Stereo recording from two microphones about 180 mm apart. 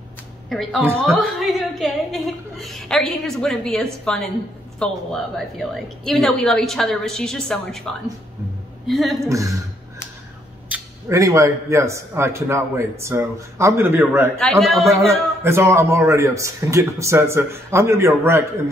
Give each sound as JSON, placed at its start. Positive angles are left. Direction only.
{"t": 0.5, "sound": "a woman's voice", "side_deg": 0}
{"t": 9.3, "sound": "speech", "side_deg": -15}
{"t": 10.7, "sound": "speech", "side_deg": -15}
{"t": 14.4, "sound": "a woman's voice", "side_deg": 0}
{"t": 14.9, "sound": "speech", "side_deg": -15}